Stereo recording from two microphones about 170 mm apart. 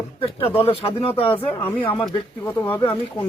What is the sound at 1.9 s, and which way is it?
Speech, 25° left (ahead or behind).